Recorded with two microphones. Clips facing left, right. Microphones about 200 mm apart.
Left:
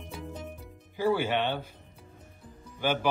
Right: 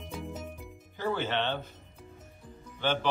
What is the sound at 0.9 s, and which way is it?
Speech, 10° left (ahead or behind).